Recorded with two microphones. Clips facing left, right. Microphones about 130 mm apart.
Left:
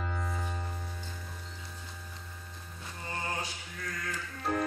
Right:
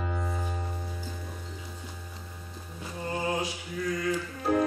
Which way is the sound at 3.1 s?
5° right (ahead or behind).